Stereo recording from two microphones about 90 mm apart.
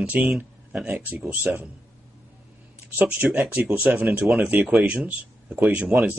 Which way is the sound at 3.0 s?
15° right (ahead or behind).